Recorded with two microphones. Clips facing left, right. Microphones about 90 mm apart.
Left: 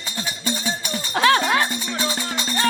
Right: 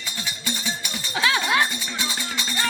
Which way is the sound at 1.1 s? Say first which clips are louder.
Left 4 dB; 50° left (ahead or behind).